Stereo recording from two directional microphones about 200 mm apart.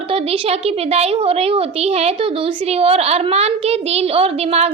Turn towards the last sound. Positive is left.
turn(degrees=-30)  # may be behind; listen again after turning